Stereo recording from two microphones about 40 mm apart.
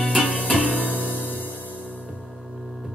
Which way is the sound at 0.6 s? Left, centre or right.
Right.